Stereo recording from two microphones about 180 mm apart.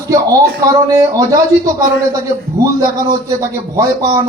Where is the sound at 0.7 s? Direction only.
20° right (ahead or behind).